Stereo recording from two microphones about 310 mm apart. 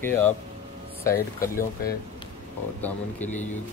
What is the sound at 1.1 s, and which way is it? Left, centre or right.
Speech, left.